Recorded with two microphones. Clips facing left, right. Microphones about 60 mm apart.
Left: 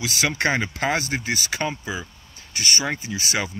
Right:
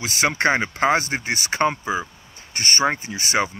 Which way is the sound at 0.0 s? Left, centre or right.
Right.